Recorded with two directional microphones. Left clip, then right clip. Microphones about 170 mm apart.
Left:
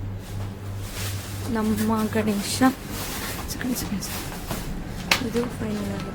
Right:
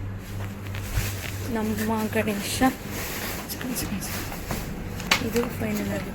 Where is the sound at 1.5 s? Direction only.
25° left (ahead or behind).